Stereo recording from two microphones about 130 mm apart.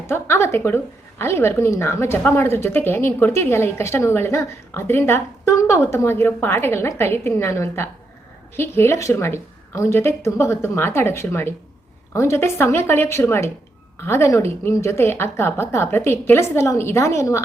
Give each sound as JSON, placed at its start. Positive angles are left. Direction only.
{"t": 0.1, "sound": "a woman's voice", "side_deg": 20}